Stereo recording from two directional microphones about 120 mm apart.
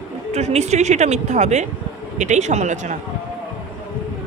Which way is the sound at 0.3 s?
65° right (ahead or behind).